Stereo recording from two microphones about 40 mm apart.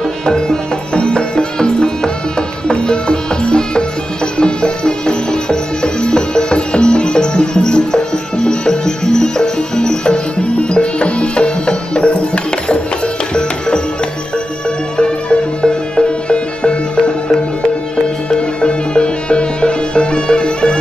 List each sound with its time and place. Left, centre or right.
0.2 s music: centre
15.0 s music: left
18.3 s music: left